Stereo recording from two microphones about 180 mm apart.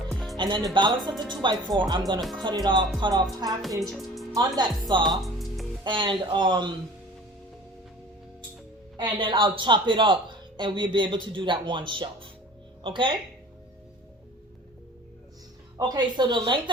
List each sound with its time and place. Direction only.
0.1 s music: centre (ahead or behind)
0.3 s speech: 25° right (ahead or behind)
3.6 s speech: centre (ahead or behind)
3.9 s music: centre (ahead or behind)
4.4 s speech: 20° right (ahead or behind)
5.0 s music: centre (ahead or behind)
5.8 s speech: 25° right (ahead or behind)
9.0 s speech: 25° right (ahead or behind)
15.8 s speech: 25° right (ahead or behind)